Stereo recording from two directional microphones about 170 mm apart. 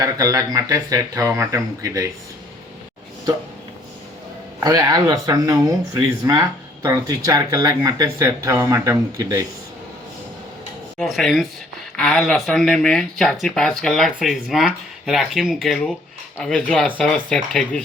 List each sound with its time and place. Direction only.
0.0 s speech: 20° right (ahead or behind)
4.6 s speech: 20° right (ahead or behind)
10.9 s speech: centre (ahead or behind)